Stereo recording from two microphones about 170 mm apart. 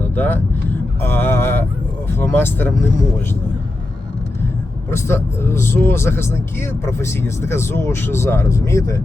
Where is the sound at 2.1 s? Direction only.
15° left (ahead or behind).